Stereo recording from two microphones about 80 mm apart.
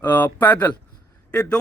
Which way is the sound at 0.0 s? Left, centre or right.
Left.